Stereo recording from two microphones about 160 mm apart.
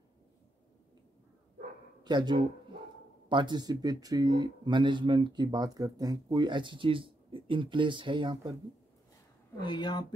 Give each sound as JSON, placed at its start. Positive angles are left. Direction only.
{"t": 2.0, "sound": "speech", "side_deg": -25}
{"t": 9.6, "sound": "speech", "side_deg": 30}